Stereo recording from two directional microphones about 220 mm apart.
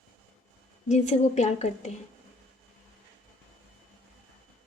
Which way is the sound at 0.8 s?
30° left (ahead or behind).